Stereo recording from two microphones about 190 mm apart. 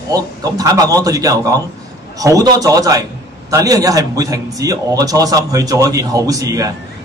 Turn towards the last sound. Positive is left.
turn(degrees=-20)  # may be behind; listen again after turning